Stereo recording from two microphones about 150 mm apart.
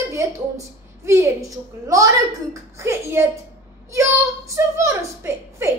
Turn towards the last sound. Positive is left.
turn(degrees=-20)  # may be behind; listen again after turning